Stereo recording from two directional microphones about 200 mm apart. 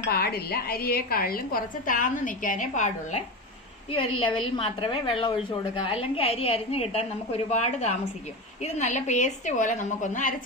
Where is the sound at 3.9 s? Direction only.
25° left (ahead or behind).